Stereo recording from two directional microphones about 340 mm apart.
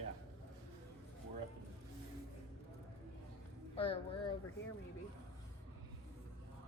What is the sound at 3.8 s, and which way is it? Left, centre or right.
Speech, centre.